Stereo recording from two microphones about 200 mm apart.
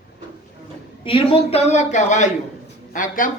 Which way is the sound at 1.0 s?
25° left (ahead or behind).